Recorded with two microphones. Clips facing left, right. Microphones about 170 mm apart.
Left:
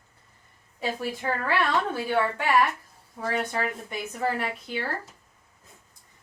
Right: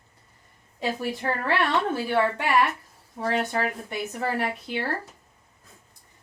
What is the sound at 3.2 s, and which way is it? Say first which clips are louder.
Speech: right 2 dB; 30° right (ahead or behind).